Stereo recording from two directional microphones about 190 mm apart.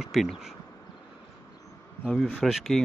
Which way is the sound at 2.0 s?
5° left (ahead or behind).